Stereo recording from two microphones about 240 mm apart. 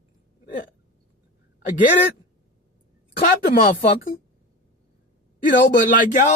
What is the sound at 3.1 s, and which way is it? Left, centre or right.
Speech, left.